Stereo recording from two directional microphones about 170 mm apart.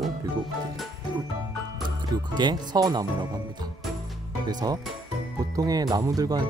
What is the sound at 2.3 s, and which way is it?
Speech, 25° right (ahead or behind).